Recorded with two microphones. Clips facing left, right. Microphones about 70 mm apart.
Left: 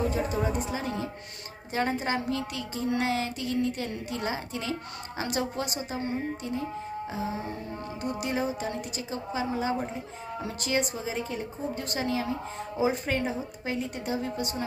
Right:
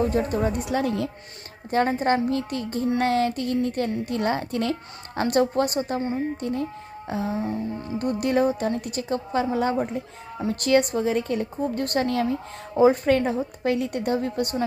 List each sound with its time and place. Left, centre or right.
0.0 s speech: right
1.7 s a woman's voice: right